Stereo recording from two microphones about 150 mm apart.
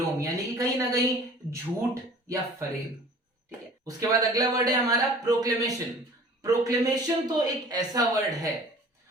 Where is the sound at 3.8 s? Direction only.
25° right (ahead or behind).